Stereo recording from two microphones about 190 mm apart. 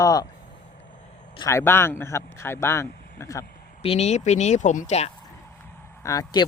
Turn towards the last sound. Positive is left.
turn(degrees=20)  # may be behind; listen again after turning